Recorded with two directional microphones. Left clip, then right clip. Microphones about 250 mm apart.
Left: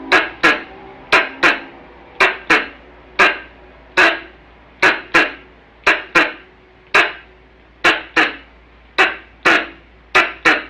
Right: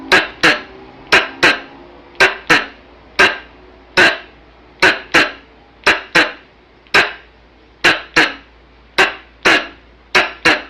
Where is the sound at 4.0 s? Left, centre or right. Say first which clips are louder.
Right 2 dB; centre.